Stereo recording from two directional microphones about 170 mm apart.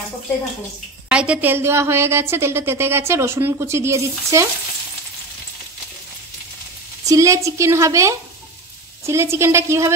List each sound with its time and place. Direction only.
1.0 s a woman's voice: 5° right (ahead or behind)
7.1 s a woman's voice: 20° right (ahead or behind)